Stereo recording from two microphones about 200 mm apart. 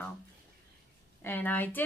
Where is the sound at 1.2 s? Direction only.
10° left (ahead or behind).